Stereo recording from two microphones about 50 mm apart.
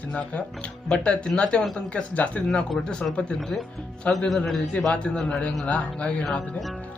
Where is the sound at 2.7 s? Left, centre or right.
Centre.